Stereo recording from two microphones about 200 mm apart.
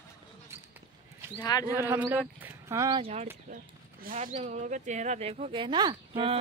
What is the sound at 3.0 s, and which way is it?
Speech, 35° right (ahead or behind).